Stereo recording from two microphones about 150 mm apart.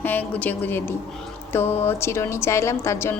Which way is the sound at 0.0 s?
10° left (ahead or behind).